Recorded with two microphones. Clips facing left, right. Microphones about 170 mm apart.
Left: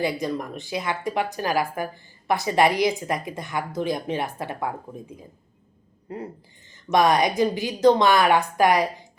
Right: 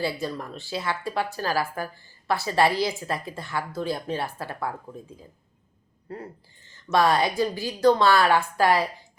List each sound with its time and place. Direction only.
0.0 s speech: 15° left (ahead or behind)